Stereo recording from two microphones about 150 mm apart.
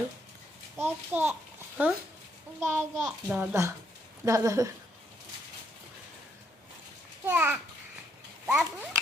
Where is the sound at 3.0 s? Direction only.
5° right (ahead or behind).